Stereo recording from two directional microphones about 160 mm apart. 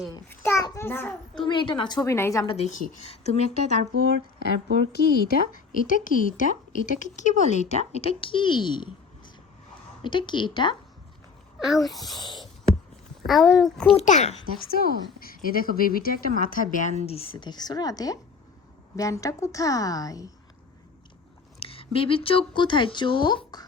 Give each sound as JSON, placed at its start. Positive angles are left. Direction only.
{"t": 0.1, "sound": "a child's voice", "side_deg": 15}
{"t": 1.4, "sound": "a woman's voice", "side_deg": 30}
{"t": 2.0, "sound": "a woman's voice", "side_deg": 15}
{"t": 2.6, "sound": "speech", "side_deg": 45}
{"t": 4.9, "sound": "speech", "side_deg": 80}
{"t": 5.7, "sound": "a woman's voice", "side_deg": 55}
{"t": 11.6, "sound": "a child's voice", "side_deg": 0}
{"t": 12.2, "sound": "a woman's voice", "side_deg": 30}
{"t": 13.2, "sound": "a child's voice", "side_deg": 0}
{"t": 13.9, "sound": "speech", "side_deg": 45}
{"t": 14.7, "sound": "a woman's voice", "side_deg": 70}
{"t": 17.1, "sound": "a woman's voice", "side_deg": 35}
{"t": 21.6, "sound": "a woman's voice", "side_deg": 35}